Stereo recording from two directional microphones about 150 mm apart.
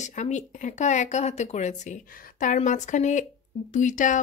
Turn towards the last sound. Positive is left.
turn(degrees=60)  # may be behind; listen again after turning